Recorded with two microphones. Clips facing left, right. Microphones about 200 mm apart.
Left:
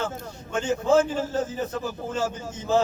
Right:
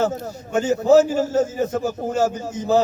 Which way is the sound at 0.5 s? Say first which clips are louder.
Right 6 dB; 40° right (ahead or behind).